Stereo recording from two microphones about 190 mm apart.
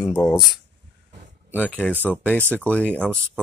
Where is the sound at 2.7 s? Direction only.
5° left (ahead or behind).